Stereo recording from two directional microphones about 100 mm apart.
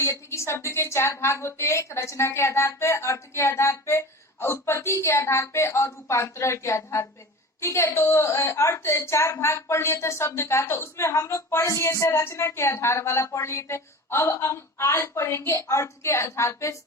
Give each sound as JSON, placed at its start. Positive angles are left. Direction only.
{"t": 0.0, "sound": "a woman's voice", "side_deg": 25}